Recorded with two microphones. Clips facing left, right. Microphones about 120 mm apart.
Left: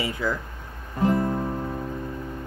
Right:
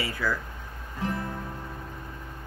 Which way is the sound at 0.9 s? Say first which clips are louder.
Left 9 dB; 45° left (ahead or behind).